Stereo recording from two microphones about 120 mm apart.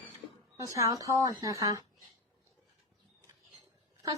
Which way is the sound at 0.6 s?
30° right (ahead or behind).